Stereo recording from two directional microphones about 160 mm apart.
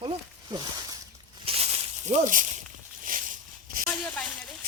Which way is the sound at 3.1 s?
60° right (ahead or behind).